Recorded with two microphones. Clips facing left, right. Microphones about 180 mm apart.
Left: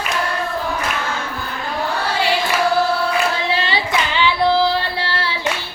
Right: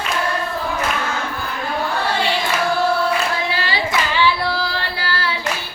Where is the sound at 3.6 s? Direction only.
25° left (ahead or behind).